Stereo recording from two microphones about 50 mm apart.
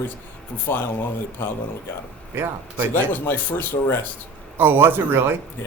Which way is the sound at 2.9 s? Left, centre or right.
Left.